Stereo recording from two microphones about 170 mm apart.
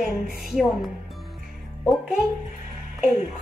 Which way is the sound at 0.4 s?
Centre (ahead or behind).